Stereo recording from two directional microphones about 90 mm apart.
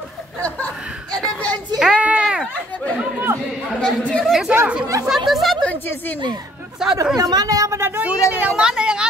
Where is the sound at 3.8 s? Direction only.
10° left (ahead or behind).